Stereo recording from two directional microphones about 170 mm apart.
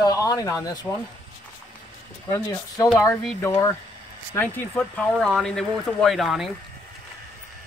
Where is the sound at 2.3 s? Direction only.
15° left (ahead or behind); by 6.5 s centre (ahead or behind).